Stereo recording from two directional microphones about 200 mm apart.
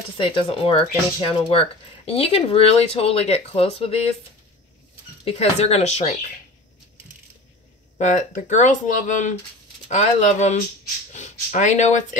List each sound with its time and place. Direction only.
0.2 s speech: 25° left (ahead or behind)
5.2 s speech: 30° left (ahead or behind)
8.0 s speech: 35° left (ahead or behind)